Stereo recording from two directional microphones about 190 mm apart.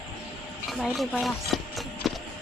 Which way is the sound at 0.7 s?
Centre (ahead or behind).